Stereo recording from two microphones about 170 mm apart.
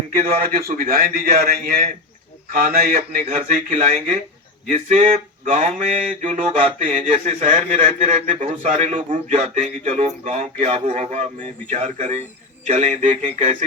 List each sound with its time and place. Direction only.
0.2 s a man's voice: 55° right (ahead or behind)
6.5 s a man's voice: 30° right (ahead or behind)
6.8 s a man's voice: 50° right (ahead or behind)